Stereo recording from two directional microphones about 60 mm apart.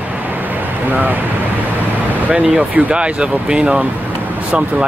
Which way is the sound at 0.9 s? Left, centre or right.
Right.